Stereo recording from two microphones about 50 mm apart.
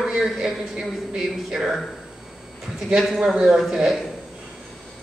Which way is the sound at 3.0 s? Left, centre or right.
Centre.